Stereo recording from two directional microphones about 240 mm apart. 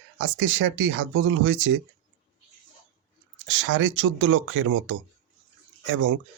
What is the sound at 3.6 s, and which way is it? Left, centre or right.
Speech, right.